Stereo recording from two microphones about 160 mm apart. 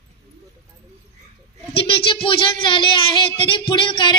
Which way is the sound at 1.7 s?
35° left (ahead or behind).